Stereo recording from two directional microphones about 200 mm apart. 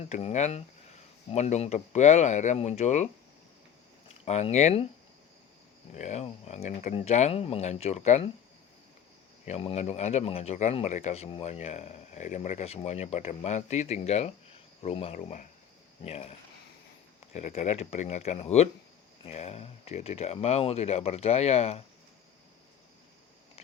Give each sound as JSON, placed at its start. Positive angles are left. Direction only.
{"t": 0.1, "sound": "speech", "side_deg": 35}
{"t": 4.3, "sound": "speech", "side_deg": 35}
{"t": 5.9, "sound": "speech", "side_deg": 35}
{"t": 9.5, "sound": "speech", "side_deg": 30}
{"t": 17.3, "sound": "speech", "side_deg": 35}